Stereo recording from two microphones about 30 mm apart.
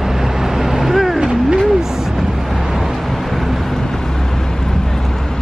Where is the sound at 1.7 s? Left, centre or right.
Centre.